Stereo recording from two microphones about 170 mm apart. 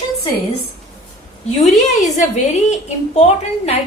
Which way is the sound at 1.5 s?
40° left (ahead or behind).